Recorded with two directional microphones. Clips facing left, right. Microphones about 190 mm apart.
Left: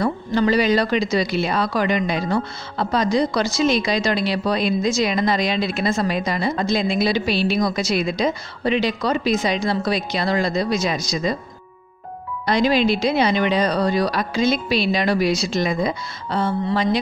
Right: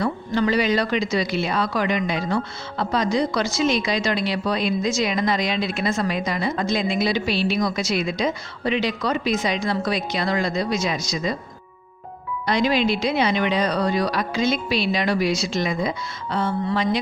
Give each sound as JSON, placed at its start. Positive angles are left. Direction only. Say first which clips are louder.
{"t": 0.0, "sound": "speech", "louder": "left 2 dB", "side_deg": 35}
{"t": 12.4, "sound": "speech", "louder": "left 3 dB", "side_deg": 35}